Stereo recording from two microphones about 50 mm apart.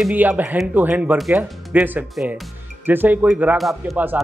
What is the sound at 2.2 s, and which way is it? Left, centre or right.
Speech, centre.